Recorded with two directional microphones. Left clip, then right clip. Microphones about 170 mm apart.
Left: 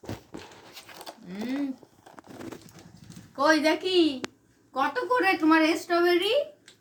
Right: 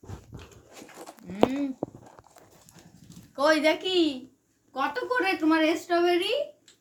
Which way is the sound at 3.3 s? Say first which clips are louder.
Even; 35° right (ahead or behind).